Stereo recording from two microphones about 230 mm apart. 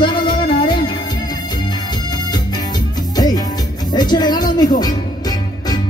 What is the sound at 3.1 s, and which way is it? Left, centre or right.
Music, centre.